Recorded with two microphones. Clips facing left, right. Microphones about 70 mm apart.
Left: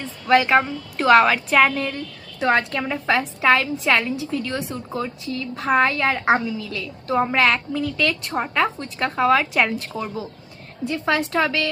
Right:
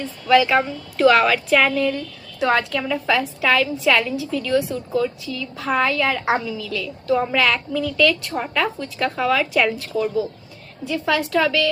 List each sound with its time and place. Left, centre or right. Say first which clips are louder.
0.3 s a woman's voice: even; left